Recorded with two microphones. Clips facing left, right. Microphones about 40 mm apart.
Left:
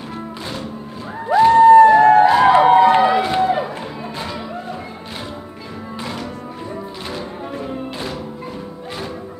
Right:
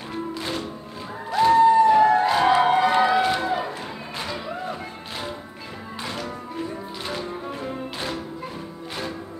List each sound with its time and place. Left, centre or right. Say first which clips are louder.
1.3 s crowd: left 6 dB; left
1.6 s music: left 8 dB; left
2.2 s a sound: left 7 dB; left
3.0 s run: left 3 dB; centre
3.4 s music: left 6 dB; left